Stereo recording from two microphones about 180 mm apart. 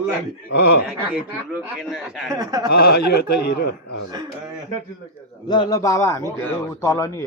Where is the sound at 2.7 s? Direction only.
60° left (ahead or behind).